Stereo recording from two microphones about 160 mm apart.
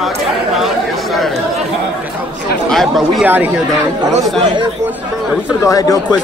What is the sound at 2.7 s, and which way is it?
Speech, centre (ahead or behind).